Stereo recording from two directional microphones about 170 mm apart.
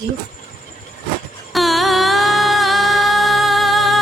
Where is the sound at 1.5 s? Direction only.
Centre (ahead or behind).